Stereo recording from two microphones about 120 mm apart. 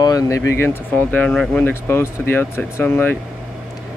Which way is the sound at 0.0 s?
30° left (ahead or behind).